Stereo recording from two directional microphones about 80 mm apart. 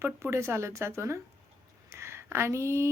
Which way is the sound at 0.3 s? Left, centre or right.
Right.